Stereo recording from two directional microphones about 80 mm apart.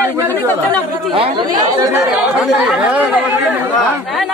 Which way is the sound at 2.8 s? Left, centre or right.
Centre.